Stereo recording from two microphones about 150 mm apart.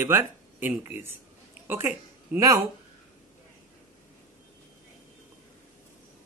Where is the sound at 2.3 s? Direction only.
25° right (ahead or behind).